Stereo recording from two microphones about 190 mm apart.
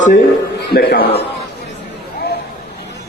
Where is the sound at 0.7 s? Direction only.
55° left (ahead or behind).